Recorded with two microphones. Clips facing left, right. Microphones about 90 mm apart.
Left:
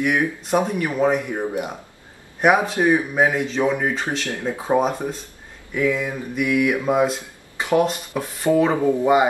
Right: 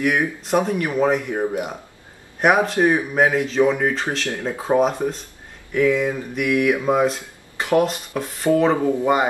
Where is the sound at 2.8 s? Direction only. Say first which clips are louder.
Right 1 dB; 5° right (ahead or behind).